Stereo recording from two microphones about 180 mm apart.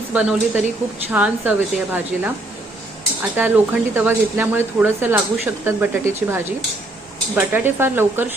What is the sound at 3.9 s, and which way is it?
Speech, 10° right (ahead or behind).